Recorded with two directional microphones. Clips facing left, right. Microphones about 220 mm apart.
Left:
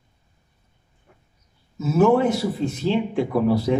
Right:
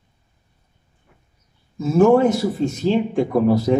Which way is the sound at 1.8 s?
5° left (ahead or behind).